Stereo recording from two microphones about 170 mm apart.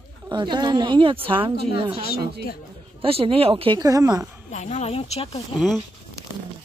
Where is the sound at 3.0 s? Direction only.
35° right (ahead or behind).